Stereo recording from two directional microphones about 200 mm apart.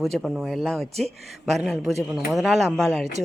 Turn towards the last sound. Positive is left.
turn(degrees=0)  # may be behind; listen again after turning